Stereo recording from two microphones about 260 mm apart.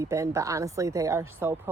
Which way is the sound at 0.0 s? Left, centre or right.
Centre.